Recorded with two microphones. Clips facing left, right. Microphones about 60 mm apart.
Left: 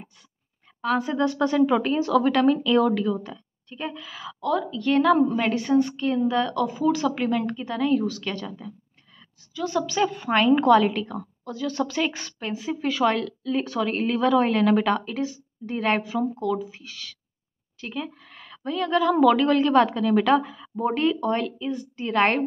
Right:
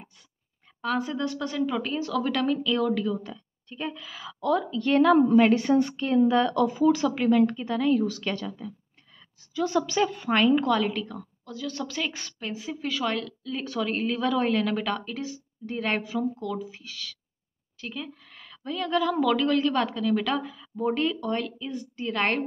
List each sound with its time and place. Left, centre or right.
0.7 s speech: centre
1.0 s a woman's voice: centre
4.4 s a woman's voice: centre
8.5 s a woman's voice: centre
9.5 s a woman's voice: centre
9.8 s a woman's voice: centre
10.0 s a woman's voice: centre
10.5 s a woman's voice: centre
19.2 s a woman's voice: centre